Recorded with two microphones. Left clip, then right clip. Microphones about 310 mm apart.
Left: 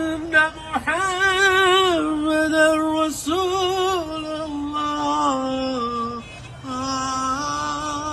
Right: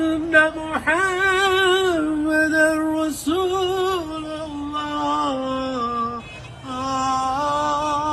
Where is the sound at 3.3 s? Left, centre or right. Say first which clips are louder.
Right 2 dB; centre; by 4.8 s left.